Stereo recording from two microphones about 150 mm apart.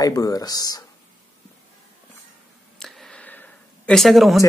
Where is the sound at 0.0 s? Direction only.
25° left (ahead or behind).